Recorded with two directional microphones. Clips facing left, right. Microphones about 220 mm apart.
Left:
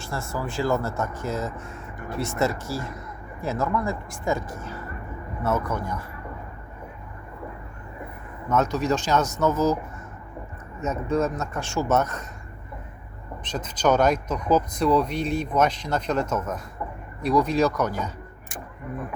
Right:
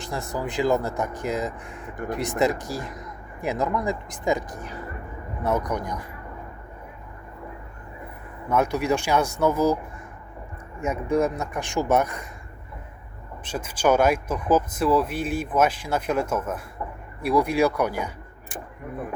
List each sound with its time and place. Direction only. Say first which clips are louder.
0.0 s speech: right 1 dB; 15° right (ahead or behind)
8.4 s speech: even; 10° right (ahead or behind)
10.8 s speech: right 1 dB; 10° right (ahead or behind)
13.4 s speech: right 1 dB; 10° right (ahead or behind)